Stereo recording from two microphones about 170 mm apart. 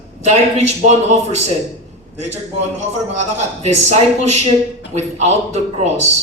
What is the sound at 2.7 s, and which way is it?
A man's voice, 40° right (ahead or behind).